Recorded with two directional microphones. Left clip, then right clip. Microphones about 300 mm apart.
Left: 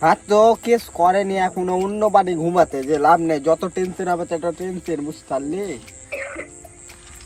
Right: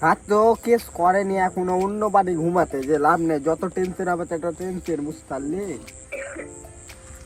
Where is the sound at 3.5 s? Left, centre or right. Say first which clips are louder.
Left 4 dB; left.